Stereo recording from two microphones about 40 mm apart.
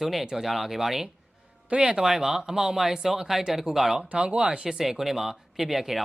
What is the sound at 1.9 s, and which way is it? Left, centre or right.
Speech, centre.